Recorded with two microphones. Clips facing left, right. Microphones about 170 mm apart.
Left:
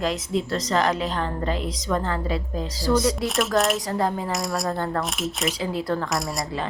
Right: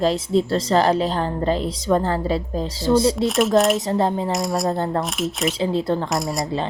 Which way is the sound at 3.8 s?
25° right (ahead or behind).